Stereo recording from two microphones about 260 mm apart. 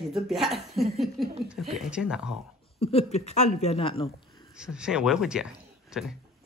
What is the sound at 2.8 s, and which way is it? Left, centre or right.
Speech, left.